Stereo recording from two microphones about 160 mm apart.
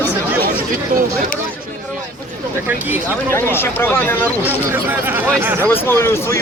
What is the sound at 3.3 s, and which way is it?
Speech, 15° left (ahead or behind).